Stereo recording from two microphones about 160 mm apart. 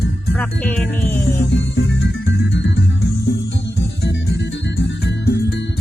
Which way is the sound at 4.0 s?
90° left.